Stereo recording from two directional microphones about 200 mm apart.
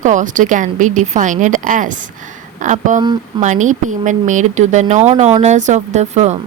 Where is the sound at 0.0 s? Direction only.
40° right (ahead or behind).